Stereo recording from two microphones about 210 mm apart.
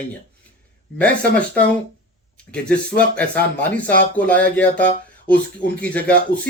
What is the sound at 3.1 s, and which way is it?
Speech, 5° left (ahead or behind).